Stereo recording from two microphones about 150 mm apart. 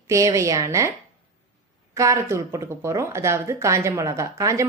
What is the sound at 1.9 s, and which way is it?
Speech, 20° right (ahead or behind).